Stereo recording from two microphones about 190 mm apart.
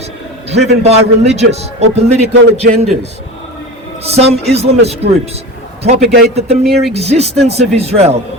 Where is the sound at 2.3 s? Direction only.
70° right (ahead or behind).